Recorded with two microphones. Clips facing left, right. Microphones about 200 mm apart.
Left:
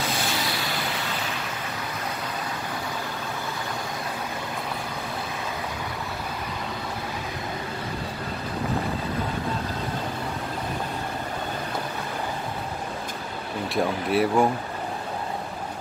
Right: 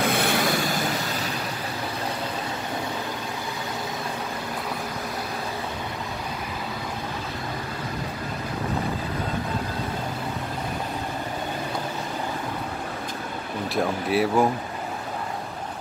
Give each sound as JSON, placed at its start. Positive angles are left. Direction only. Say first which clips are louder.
{"t": 0.0, "sound": "vehicle", "louder": "right 5 dB", "side_deg": -60}
{"t": 13.7, "sound": "speech", "louder": "even", "side_deg": 0}